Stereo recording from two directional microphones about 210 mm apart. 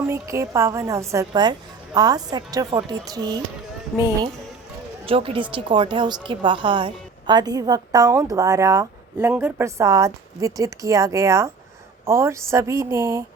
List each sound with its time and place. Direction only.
0.1 s a woman's voice: 15° right (ahead or behind)
5.0 s a woman's voice: 25° right (ahead or behind)